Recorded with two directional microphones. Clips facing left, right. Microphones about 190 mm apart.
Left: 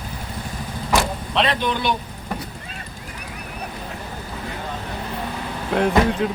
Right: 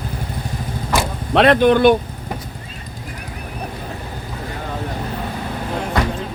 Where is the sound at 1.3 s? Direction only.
55° right (ahead or behind).